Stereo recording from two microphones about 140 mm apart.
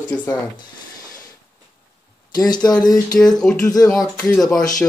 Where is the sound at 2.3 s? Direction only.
30° left (ahead or behind).